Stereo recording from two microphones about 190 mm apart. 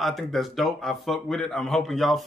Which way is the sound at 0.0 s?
Centre (ahead or behind).